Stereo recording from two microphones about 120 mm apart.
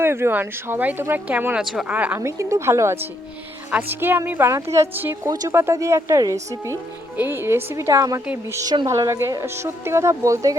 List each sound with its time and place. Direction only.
0.0 s speech: 20° right (ahead or behind)
2.2 s speech: 25° right (ahead or behind)